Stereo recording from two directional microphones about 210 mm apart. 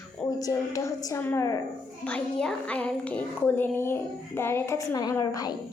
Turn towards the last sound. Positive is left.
turn(degrees=15)  # may be behind; listen again after turning